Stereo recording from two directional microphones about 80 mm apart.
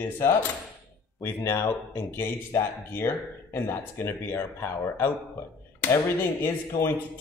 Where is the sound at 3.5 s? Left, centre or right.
Left.